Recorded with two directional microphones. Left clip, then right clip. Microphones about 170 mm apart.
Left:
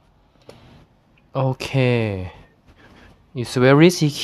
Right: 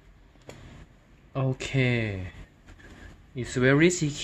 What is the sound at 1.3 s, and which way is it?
Speech, 50° left (ahead or behind).